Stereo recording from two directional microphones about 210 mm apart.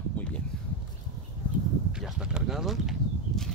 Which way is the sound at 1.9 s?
5° right (ahead or behind).